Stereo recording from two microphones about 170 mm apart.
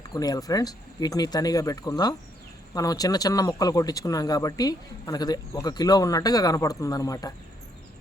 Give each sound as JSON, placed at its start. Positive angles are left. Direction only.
{"t": 0.1, "sound": "speech", "side_deg": 20}